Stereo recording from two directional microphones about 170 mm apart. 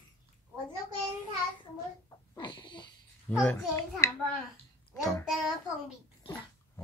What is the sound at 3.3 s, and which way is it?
Speech, 5° left (ahead or behind).